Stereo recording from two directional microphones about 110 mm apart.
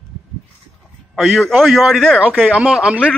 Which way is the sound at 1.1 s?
Centre (ahead or behind).